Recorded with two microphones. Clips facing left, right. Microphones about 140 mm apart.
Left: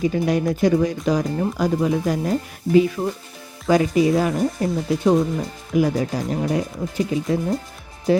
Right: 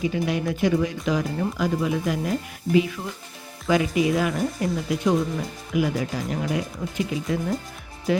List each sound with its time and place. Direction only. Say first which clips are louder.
0.0 s speech: left 5 dB; 40° left (ahead or behind)